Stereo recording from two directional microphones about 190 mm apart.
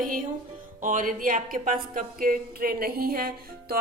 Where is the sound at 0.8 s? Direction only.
45° right (ahead or behind).